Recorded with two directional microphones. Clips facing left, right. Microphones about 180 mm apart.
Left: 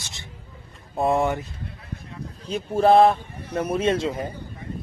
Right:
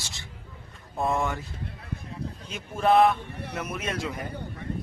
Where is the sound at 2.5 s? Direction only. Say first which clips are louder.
Left 6 dB; 35° left (ahead or behind).